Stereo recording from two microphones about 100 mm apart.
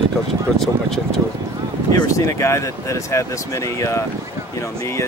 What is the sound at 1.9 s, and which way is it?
Speech, 35° left (ahead or behind).